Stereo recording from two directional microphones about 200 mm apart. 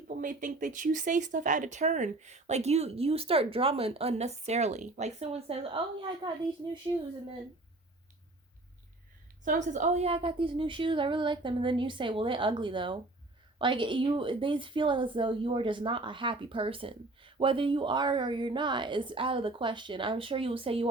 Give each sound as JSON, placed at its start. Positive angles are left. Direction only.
{"t": 0.2, "sound": "speech", "side_deg": -40}
{"t": 9.4, "sound": "a woman's voice", "side_deg": -40}